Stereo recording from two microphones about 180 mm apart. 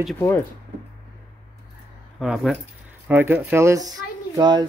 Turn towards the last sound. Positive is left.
turn(degrees=-25)  # may be behind; listen again after turning